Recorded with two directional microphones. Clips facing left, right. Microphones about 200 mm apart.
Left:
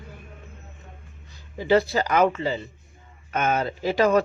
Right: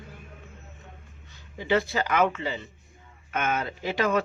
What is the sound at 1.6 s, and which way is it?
Speech, 35° left (ahead or behind).